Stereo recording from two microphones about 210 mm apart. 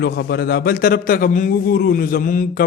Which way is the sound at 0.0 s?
50° left (ahead or behind).